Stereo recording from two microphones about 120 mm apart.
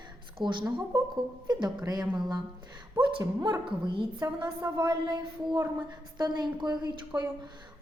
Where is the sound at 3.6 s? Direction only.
45° right (ahead or behind).